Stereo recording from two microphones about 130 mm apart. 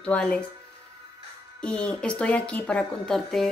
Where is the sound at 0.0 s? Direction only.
10° left (ahead or behind).